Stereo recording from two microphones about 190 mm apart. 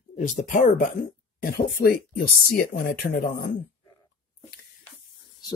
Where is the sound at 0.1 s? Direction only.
40° left (ahead or behind).